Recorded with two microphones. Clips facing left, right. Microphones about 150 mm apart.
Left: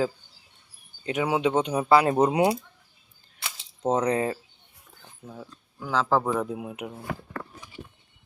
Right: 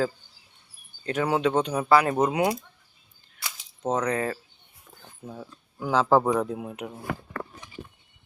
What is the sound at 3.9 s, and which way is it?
Speech, 30° left (ahead or behind).